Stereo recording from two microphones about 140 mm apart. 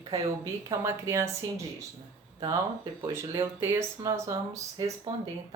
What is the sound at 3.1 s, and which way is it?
A woman's voice, 20° right (ahead or behind).